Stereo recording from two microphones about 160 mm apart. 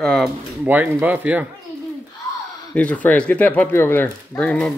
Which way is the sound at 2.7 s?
10° left (ahead or behind).